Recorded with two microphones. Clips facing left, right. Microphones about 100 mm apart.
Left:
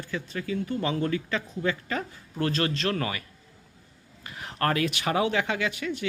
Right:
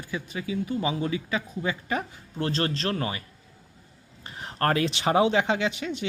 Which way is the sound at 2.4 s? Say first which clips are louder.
Left 1 dB; 30° right (ahead or behind).